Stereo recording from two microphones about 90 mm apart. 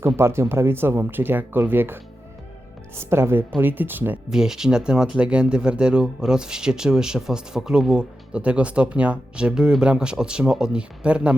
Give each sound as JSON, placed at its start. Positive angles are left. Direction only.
{"t": 0.2, "sound": "speech", "side_deg": -30}
{"t": 4.3, "sound": "speech", "side_deg": -5}